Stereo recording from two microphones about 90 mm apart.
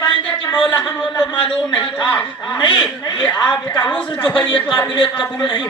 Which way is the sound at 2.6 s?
55° left (ahead or behind).